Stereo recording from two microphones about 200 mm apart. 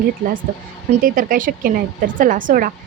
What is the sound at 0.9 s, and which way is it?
A woman's voice, 45° right (ahead or behind).